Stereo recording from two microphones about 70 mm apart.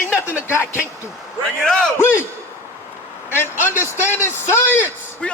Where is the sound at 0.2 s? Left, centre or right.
Left.